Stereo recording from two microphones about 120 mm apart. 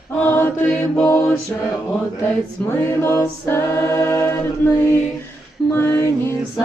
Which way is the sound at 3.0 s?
25° left (ahead or behind).